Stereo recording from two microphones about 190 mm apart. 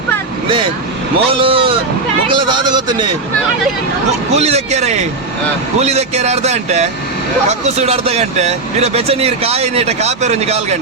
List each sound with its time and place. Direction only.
1.3 s speech: 25° right (ahead or behind)
4.4 s speech: 35° right (ahead or behind)